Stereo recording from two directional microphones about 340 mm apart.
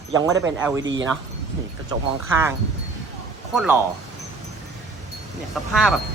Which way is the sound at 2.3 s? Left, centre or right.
Centre.